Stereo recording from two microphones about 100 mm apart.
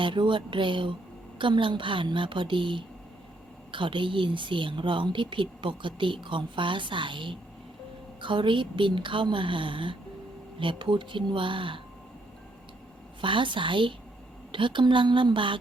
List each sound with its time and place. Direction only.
0.0 s a woman's voice: 55° right (ahead or behind)
13.2 s a woman's voice: 55° right (ahead or behind)